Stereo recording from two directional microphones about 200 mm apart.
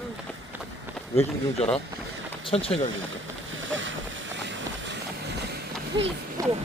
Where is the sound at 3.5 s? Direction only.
70° right (ahead or behind).